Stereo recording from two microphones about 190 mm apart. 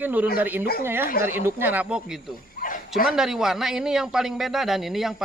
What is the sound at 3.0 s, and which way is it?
A man's voice, 5° right (ahead or behind).